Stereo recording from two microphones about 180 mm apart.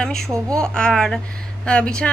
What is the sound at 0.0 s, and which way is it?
Speech, 5° left (ahead or behind).